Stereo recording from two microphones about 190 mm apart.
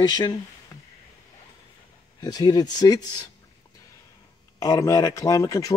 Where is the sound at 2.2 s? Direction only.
20° left (ahead or behind).